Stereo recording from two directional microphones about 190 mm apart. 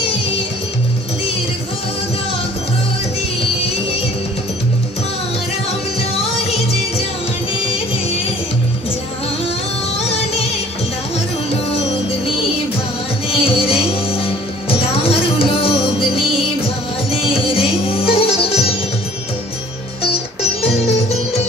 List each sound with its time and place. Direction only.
6.4 s music: 35° left (ahead or behind)
9.9 s music: 35° left (ahead or behind)
13.3 s music: 30° left (ahead or behind)
20.6 s music: 35° left (ahead or behind)